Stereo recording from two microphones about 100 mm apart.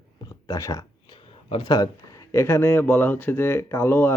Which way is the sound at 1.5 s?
50° left (ahead or behind).